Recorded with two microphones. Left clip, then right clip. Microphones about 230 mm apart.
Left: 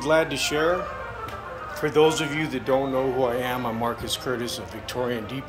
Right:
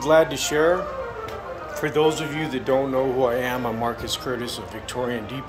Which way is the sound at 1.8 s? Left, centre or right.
Centre.